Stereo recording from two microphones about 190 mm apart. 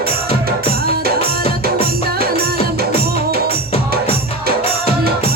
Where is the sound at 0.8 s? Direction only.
55° right (ahead or behind).